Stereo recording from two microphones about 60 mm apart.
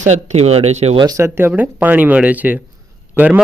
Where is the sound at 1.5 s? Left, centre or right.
Right.